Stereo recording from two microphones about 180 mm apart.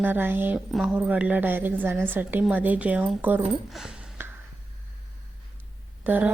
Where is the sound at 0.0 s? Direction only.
10° right (ahead or behind).